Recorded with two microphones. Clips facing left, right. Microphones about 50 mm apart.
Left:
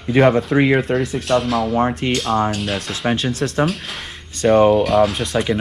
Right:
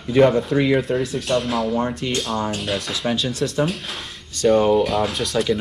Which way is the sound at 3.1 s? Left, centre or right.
Left.